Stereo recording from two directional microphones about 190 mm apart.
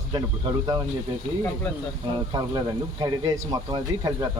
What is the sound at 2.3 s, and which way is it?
Speech, 25° right (ahead or behind).